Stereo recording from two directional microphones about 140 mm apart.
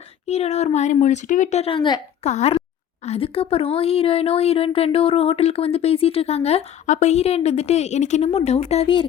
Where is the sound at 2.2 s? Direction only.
50° left (ahead or behind).